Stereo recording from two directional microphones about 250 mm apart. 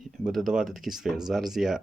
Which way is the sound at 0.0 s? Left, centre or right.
Centre.